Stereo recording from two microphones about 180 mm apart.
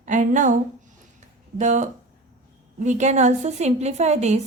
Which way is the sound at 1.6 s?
40° right (ahead or behind).